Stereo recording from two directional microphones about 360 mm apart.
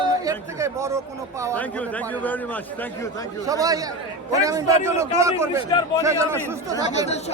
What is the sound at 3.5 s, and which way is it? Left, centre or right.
A man's voice, centre.